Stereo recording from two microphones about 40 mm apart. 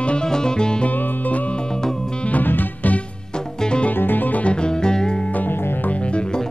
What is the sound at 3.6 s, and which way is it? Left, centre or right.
Music, left.